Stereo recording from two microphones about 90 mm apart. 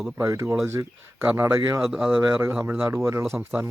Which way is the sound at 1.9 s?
5° right (ahead or behind).